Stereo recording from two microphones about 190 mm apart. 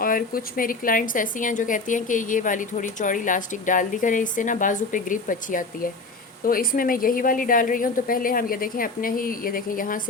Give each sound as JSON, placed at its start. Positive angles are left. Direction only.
{"t": 0.0, "sound": "a woman's voice", "side_deg": 50}